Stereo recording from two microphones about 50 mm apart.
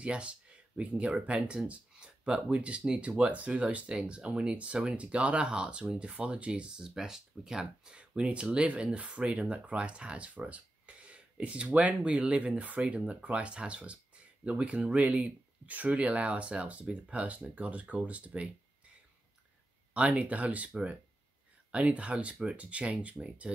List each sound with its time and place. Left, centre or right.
0.0 s speech: right
3.9 s speech: centre
4.3 s speech: right
6.9 s speech: centre
8.0 s speech: right
19.9 s speech: right
21.7 s speech: right